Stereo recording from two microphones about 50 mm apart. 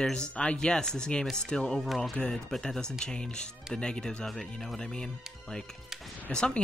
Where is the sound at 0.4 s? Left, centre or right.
Left.